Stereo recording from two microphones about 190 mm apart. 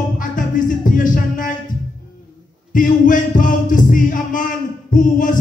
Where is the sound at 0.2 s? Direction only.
45° left (ahead or behind).